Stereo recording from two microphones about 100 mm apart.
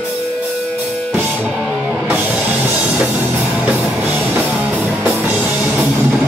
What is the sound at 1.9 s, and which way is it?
Music, 15° right (ahead or behind).